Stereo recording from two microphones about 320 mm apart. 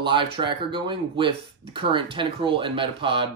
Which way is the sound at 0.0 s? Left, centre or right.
Centre.